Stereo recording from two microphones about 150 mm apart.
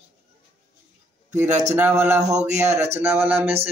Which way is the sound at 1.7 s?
10° right (ahead or behind).